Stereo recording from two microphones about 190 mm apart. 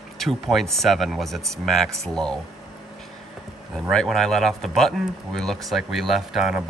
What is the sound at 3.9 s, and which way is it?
Speech, centre (ahead or behind).